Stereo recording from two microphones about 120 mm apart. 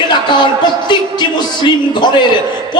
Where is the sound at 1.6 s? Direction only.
40° left (ahead or behind).